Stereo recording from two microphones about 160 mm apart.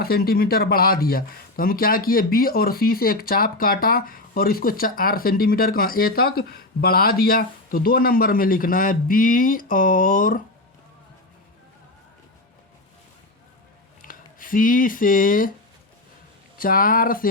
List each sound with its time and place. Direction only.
0.0 s speech: 70° left (ahead or behind)
14.0 s speech: 60° left (ahead or behind)
16.6 s speech: 65° left (ahead or behind)